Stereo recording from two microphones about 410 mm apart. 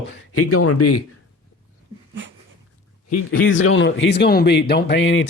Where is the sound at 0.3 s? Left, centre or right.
Left.